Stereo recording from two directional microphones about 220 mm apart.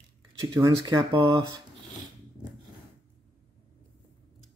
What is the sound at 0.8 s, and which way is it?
Speech, 15° right (ahead or behind).